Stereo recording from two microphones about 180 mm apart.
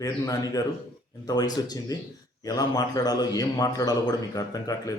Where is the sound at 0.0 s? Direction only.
20° left (ahead or behind).